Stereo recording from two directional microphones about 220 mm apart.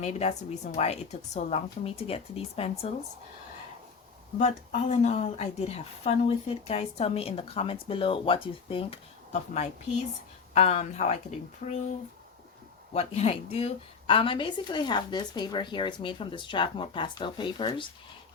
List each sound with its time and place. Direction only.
0.0 s a woman's voice: 30° left (ahead or behind)
4.4 s a woman's voice: 30° left (ahead or behind)
12.9 s a woman's voice: 25° left (ahead or behind)